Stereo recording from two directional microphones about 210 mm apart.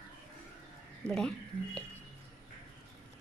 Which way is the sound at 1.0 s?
5° left (ahead or behind).